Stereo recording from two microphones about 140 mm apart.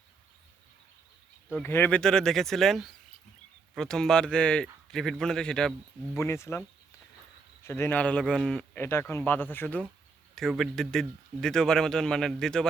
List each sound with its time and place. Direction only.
1.6 s speech: 15° left (ahead or behind)
6.1 s speech: 20° left (ahead or behind)
7.6 s a man's voice: 15° left (ahead or behind)
8.8 s a man's voice: 15° left (ahead or behind)
10.3 s speech: centre (ahead or behind)